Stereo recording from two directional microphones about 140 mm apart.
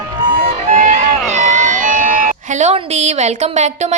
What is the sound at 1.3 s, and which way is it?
Speech, 60° right (ahead or behind).